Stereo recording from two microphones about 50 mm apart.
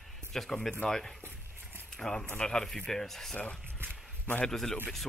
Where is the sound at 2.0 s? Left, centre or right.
Centre.